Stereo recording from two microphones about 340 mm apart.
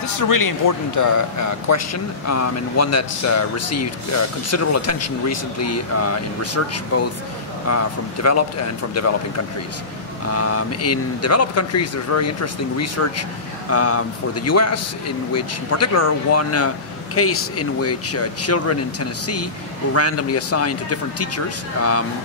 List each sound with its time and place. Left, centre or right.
0.0 s a man's voice: left
10.2 s a man's voice: left